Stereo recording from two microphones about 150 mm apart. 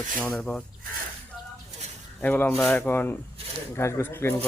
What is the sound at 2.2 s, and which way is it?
Speech, 10° left (ahead or behind).